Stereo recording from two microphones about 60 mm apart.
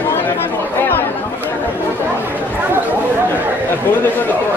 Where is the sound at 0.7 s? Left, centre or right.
Left.